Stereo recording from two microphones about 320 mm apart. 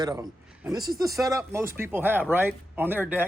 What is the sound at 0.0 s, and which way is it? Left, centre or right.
Speech, centre.